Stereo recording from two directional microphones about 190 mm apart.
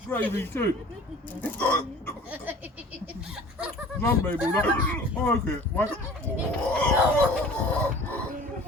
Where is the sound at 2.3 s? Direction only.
10° right (ahead or behind).